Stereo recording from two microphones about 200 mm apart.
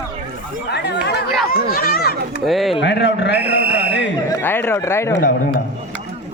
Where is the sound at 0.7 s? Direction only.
55° left (ahead or behind).